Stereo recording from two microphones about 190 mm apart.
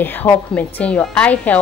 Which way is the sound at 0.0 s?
10° left (ahead or behind).